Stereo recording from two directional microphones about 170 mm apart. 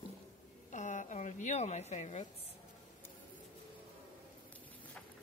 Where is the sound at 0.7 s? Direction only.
45° left (ahead or behind).